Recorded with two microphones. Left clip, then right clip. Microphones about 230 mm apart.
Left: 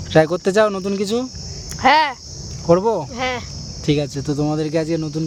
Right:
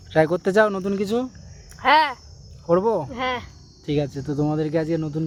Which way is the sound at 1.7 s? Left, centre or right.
Centre.